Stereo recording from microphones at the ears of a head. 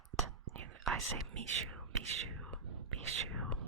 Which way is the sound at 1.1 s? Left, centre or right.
Right.